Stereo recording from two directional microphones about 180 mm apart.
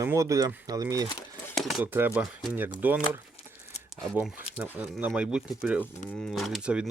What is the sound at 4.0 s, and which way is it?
Speech, 5° left (ahead or behind).